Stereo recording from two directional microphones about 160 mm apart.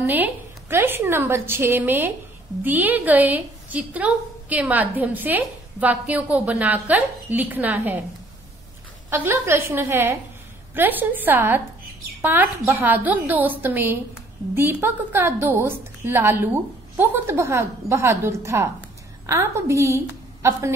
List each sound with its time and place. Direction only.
0.0 s a woman's voice: 10° right (ahead or behind)
9.1 s a woman's voice: 15° right (ahead or behind)